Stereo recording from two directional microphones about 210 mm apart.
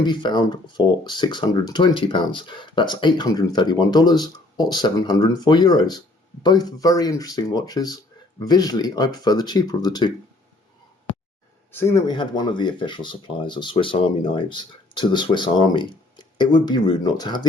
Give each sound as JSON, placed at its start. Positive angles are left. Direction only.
{"t": 0.0, "sound": "speech", "side_deg": 20}
{"t": 11.7, "sound": "speech", "side_deg": 10}